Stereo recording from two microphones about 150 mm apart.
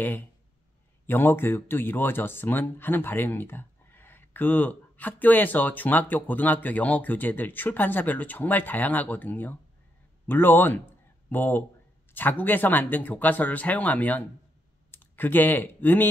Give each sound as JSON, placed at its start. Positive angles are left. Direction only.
{"t": 1.0, "sound": "speech", "side_deg": 15}